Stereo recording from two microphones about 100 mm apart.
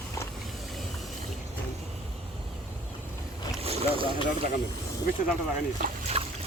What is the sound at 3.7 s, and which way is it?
Boat, 90° right.